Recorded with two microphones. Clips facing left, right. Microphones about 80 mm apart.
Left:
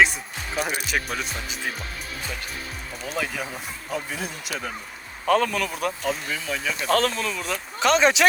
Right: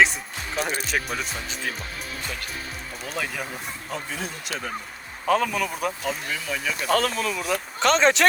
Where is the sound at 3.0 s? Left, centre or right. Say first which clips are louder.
Left 2 dB; centre.